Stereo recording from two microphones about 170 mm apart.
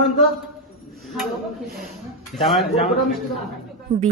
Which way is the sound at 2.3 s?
Centre (ahead or behind).